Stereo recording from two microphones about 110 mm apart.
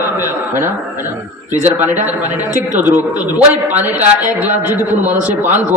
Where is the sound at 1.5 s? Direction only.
15° right (ahead or behind).